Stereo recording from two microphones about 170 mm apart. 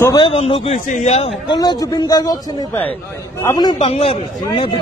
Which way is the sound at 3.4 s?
25° left (ahead or behind).